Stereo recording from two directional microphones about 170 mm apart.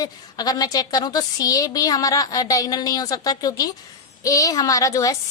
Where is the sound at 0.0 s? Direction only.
20° left (ahead or behind).